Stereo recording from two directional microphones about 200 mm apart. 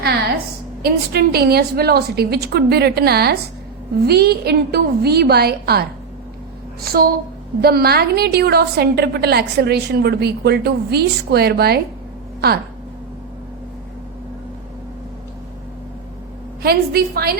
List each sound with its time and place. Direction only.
0.8 s a woman's voice: 50° right (ahead or behind)
6.8 s a woman's voice: 50° right (ahead or behind)
16.6 s a woman's voice: 50° right (ahead or behind)